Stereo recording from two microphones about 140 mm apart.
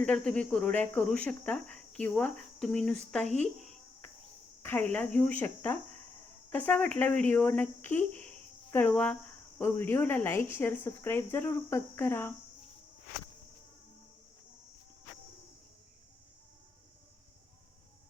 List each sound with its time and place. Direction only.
0.0 s speech: 10° left (ahead or behind)
3.3 s a sound: 10° left (ahead or behind)
4.6 s speech: 15° left (ahead or behind)